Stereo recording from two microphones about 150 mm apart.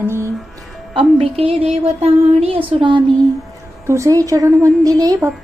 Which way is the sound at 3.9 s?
20° right (ahead or behind).